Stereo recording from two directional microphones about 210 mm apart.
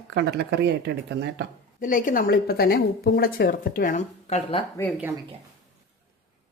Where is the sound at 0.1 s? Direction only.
55° right (ahead or behind).